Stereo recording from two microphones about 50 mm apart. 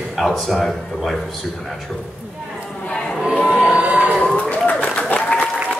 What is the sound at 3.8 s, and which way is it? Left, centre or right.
Crowd, right.